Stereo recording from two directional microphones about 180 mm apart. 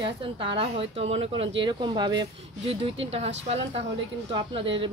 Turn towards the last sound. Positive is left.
turn(degrees=-30)  # may be behind; listen again after turning